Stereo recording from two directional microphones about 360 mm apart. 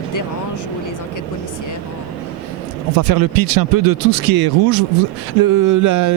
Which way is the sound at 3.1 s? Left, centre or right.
Right.